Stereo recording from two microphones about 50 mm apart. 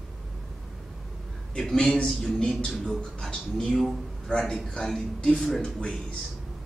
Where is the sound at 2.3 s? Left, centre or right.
Centre.